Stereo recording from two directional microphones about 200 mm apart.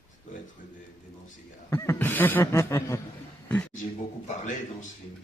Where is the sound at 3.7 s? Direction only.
40° left (ahead or behind).